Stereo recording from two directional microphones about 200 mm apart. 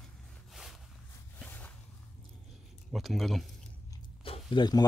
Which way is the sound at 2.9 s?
Centre (ahead or behind).